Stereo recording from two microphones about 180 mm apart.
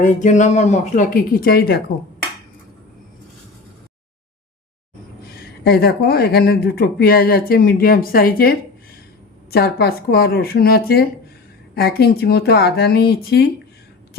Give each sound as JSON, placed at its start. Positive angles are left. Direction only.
{"t": 0.0, "sound": "speech", "side_deg": 45}
{"t": 5.4, "sound": "speech", "side_deg": 60}